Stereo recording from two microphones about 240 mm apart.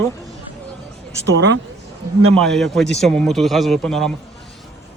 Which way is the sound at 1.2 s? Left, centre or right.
Right.